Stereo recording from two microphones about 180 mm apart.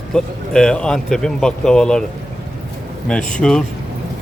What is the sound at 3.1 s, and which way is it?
Speech, 5° left (ahead or behind).